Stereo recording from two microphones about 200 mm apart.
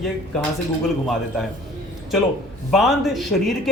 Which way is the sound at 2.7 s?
Centre (ahead or behind).